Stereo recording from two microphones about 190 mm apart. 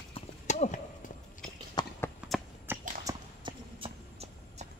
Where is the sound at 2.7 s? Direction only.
20° right (ahead or behind).